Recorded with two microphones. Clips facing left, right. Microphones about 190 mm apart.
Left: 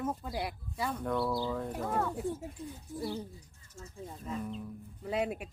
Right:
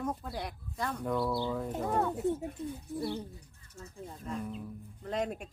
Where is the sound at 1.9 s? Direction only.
20° right (ahead or behind).